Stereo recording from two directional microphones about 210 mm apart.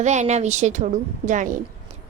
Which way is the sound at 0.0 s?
35° right (ahead or behind).